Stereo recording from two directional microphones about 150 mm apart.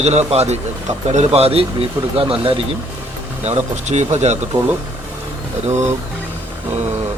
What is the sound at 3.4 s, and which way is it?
Speech, 50° right (ahead or behind).